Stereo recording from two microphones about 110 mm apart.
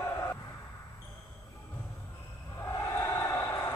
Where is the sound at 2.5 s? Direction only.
25° left (ahead or behind).